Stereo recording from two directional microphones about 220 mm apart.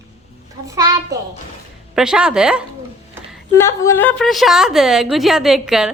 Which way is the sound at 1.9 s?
5° right (ahead or behind).